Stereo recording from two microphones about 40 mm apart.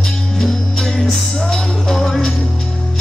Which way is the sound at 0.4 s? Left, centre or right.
Centre.